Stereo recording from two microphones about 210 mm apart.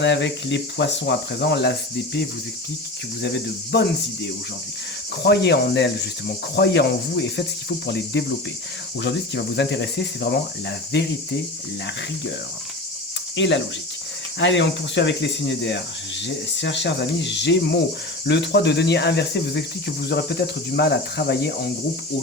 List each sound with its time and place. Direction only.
0.0 s speech: 60° left (ahead or behind)
3.2 s cricket: 55° left (ahead or behind)
9.0 s speech: 55° left (ahead or behind)
13.3 s speech: 60° left (ahead or behind)
18.3 s cricket: 55° left (ahead or behind)